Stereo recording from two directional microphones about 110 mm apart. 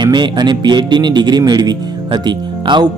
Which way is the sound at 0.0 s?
40° right (ahead or behind).